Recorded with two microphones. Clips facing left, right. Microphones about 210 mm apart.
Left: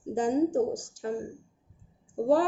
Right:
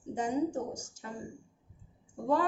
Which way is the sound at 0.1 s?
35° left (ahead or behind).